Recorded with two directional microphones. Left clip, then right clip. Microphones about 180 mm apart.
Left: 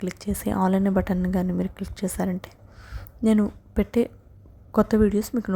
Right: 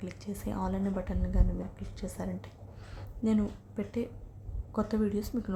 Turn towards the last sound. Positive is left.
turn(degrees=40)  # may be behind; listen again after turning